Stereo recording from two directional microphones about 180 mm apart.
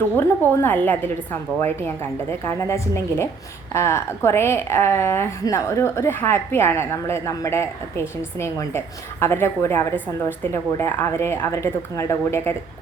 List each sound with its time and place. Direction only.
0.2 s a woman's voice: 10° left (ahead or behind)